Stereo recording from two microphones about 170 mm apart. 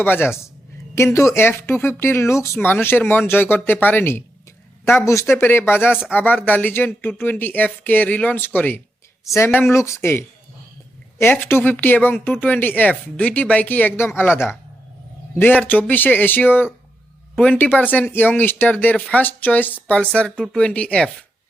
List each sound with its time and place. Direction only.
0.0 s speech: 10° left (ahead or behind)